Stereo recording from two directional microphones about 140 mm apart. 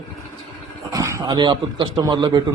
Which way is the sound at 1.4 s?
35° right (ahead or behind).